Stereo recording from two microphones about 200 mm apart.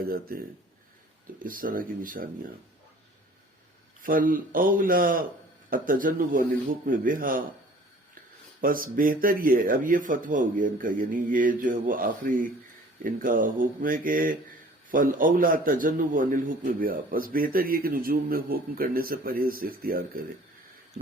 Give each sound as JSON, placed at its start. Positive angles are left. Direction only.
{"t": 0.1, "sound": "speech", "side_deg": -45}
{"t": 4.0, "sound": "speech", "side_deg": -45}
{"t": 8.6, "sound": "speech", "side_deg": -45}